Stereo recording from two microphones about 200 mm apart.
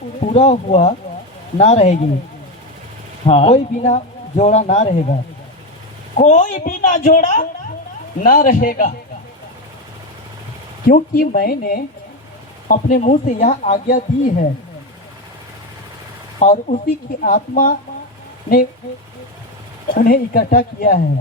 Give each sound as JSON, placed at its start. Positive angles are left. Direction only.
{"t": 0.2, "sound": "speech", "side_deg": 35}
{"t": 3.2, "sound": "speech", "side_deg": 30}
{"t": 6.1, "sound": "speech", "side_deg": 40}
{"t": 10.8, "sound": "speech", "side_deg": 45}
{"t": 16.4, "sound": "speech", "side_deg": 35}
{"t": 19.9, "sound": "speech", "side_deg": 45}